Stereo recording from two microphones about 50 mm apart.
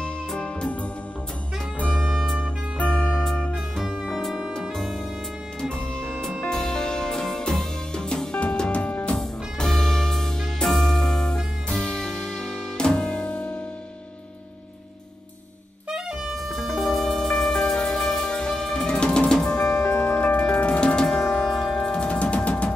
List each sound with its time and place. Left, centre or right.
0.0 s music: centre
1.8 s saxophone: left
2.8 s music: left
4.0 s music: centre
5.6 s music: left
9.1 s music: centre
16.4 s music: centre
19.9 s music: left
20.2 s music: left